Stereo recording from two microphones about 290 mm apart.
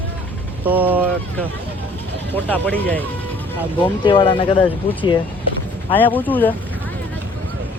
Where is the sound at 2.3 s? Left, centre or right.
Centre.